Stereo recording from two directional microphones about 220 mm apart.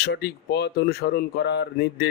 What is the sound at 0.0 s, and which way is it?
Speech, 50° left (ahead or behind).